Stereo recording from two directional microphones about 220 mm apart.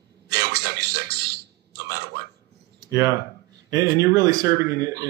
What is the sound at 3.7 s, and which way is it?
Speech, 15° right (ahead or behind).